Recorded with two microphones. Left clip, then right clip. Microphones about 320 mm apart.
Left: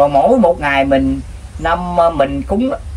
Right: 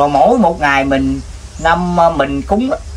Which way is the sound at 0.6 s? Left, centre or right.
Centre.